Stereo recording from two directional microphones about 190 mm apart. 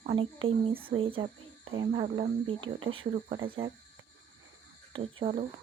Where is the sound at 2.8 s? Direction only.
90° right.